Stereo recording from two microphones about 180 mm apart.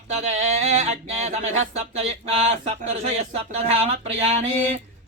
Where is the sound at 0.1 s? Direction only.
40° right (ahead or behind).